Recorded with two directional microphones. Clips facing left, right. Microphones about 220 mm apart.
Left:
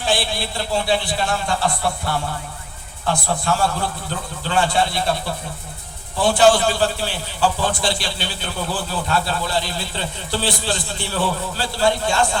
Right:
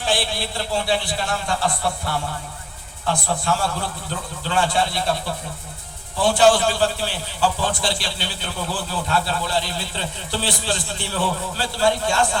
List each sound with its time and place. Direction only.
0.0 s a man's voice: 15° left (ahead or behind)
3.1 s a man's voice: 45° left (ahead or behind)
4.4 s a man's voice: 60° left (ahead or behind)
6.2 s a man's voice: 55° left (ahead or behind); by 12.4 s 25° left (ahead or behind)